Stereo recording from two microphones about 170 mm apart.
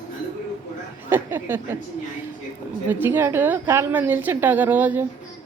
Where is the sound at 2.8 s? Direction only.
10° right (ahead or behind).